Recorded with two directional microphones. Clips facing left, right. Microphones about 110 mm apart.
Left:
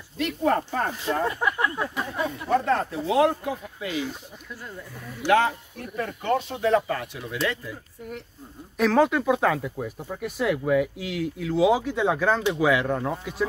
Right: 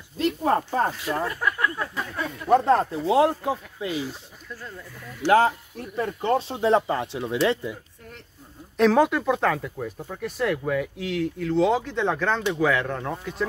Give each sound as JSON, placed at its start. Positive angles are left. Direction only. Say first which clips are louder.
{"t": 0.2, "sound": "speech", "louder": "right 1 dB", "side_deg": -30}
{"t": 0.9, "sound": "speech", "louder": "left 2 dB", "side_deg": 25}
{"t": 2.5, "sound": "speech", "louder": "right 5 dB", "side_deg": -35}
{"t": 5.2, "sound": "speech", "louder": "right 2 dB", "side_deg": 15}
{"t": 5.9, "sound": "speech", "louder": "right 2 dB", "side_deg": -30}
{"t": 8.7, "sound": "speech", "louder": "right 1 dB", "side_deg": 0}